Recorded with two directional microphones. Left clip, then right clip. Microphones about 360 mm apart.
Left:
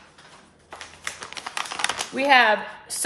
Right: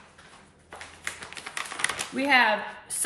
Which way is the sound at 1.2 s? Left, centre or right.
Centre.